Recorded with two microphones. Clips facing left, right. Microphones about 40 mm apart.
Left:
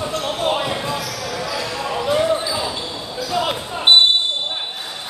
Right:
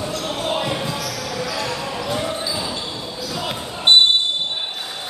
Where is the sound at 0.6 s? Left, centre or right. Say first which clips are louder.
Left 1 dB; centre.